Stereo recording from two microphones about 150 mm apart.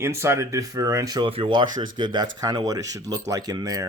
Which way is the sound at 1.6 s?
60° right (ahead or behind).